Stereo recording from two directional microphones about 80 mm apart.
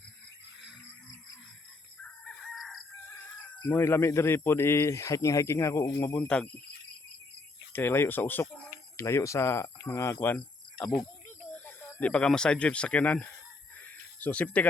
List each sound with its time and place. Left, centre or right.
2.0 s chicken: centre
2.6 s chicken: centre
3.6 s speech: left
6.1 s speech: centre
7.7 s speech: left
9.0 s speech: left
10.3 s cricket: centre
11.5 s speech: centre
13.7 s a sound: centre